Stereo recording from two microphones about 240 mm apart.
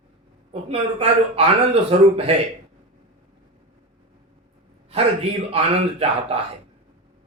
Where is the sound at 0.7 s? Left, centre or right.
Right.